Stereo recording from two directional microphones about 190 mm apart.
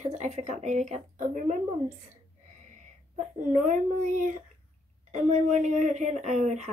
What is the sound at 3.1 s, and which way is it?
A child's voice, 40° right (ahead or behind).